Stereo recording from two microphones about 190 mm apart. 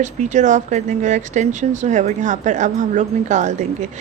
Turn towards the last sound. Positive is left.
turn(degrees=-40)  # may be behind; listen again after turning